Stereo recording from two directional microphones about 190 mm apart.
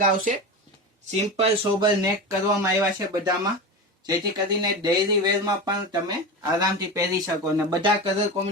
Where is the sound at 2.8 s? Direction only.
15° right (ahead or behind).